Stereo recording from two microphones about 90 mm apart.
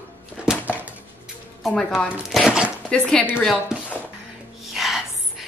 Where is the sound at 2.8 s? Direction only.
10° left (ahead or behind).